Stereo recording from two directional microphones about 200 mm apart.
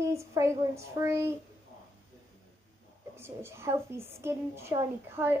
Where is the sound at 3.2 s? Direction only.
10° right (ahead or behind).